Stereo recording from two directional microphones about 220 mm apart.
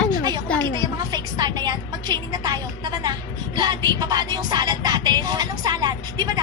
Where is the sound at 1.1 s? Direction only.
20° right (ahead or behind).